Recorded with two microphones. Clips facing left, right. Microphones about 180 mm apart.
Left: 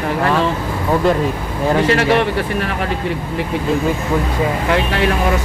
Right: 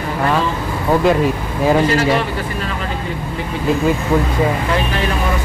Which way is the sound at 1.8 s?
65° left (ahead or behind).